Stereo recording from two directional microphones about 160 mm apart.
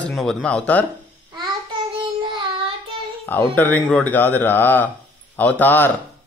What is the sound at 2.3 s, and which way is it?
Child singing, 30° right (ahead or behind).